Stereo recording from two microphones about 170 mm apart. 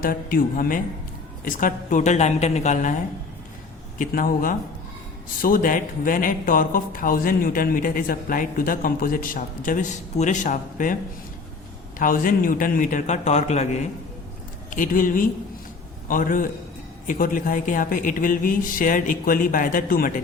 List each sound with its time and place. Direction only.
0.0 s speech: 60° left (ahead or behind)
3.9 s speech: 55° left (ahead or behind)
11.9 s speech: 55° left (ahead or behind)
14.7 s speech: 50° left (ahead or behind)